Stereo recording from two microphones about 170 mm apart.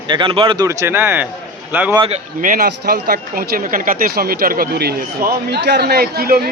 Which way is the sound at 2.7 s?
65° right (ahead or behind).